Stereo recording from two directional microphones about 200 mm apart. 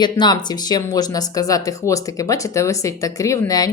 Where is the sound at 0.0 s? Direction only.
20° left (ahead or behind).